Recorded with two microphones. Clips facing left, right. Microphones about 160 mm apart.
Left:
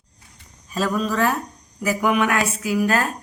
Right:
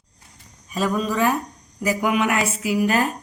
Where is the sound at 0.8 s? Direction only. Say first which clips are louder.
Even; 10° right (ahead or behind).